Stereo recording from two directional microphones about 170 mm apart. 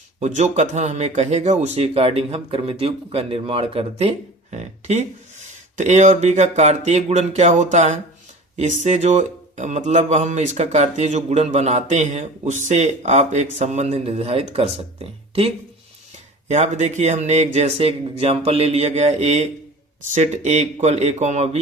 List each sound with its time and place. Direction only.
0.2 s speech: 45° right (ahead or behind)
4.5 s a sound: 40° right (ahead or behind)
5.7 s speech: 45° right (ahead or behind)